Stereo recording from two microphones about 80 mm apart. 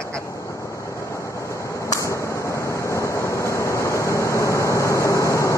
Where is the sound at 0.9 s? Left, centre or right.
Left.